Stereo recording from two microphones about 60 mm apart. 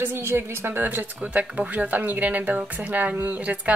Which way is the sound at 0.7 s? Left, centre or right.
Right.